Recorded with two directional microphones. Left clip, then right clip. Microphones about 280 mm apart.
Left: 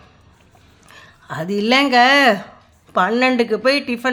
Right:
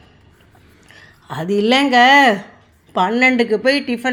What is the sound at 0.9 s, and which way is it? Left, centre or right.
A woman's voice, centre.